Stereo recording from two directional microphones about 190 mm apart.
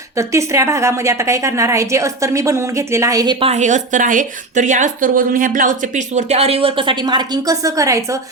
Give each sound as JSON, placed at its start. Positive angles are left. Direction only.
{"t": 0.2, "sound": "a woman's voice", "side_deg": -15}
{"t": 3.4, "sound": "speech", "side_deg": -35}